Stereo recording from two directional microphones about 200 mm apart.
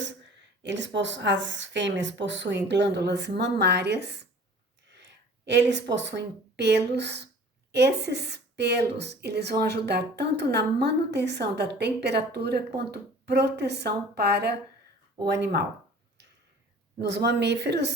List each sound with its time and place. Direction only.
0.6 s a woman's voice: 65° right (ahead or behind)
17.0 s a woman's voice: 60° right (ahead or behind)